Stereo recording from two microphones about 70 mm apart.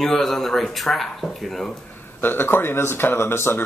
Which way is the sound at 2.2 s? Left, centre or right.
Left.